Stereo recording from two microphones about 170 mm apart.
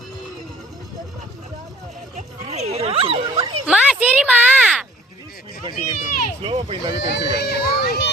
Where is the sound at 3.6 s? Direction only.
5° right (ahead or behind).